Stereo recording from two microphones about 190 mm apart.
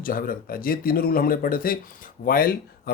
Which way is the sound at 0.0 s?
50° left (ahead or behind).